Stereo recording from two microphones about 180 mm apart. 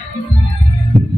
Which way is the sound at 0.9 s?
Centre (ahead or behind).